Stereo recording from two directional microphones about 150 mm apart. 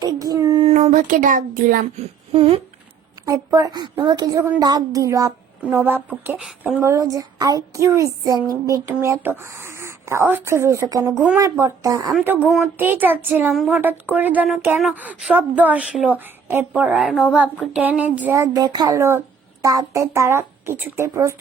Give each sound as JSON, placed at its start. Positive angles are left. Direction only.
{"t": 0.0, "sound": "a sound", "side_deg": -25}
{"t": 0.8, "sound": "a child's voice", "side_deg": -60}
{"t": 2.0, "sound": "speech", "side_deg": -40}
{"t": 3.2, "sound": "speech", "side_deg": -20}
{"t": 6.9, "sound": "speech", "side_deg": -20}
{"t": 12.1, "sound": "speech", "side_deg": -10}
{"t": 18.3, "sound": "speech", "side_deg": -20}